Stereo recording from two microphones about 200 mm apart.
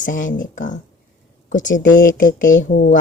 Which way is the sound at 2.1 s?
45° left (ahead or behind).